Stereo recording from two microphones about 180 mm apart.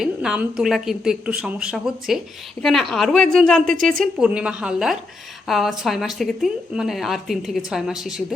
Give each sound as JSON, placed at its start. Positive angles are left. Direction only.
{"t": 0.0, "sound": "a woman's voice", "side_deg": -5}